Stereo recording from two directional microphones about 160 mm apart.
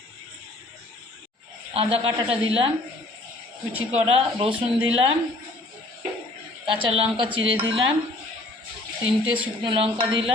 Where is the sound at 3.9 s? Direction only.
40° right (ahead or behind).